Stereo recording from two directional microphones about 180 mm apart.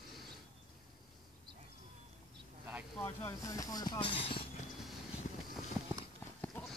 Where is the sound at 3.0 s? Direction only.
15° left (ahead or behind).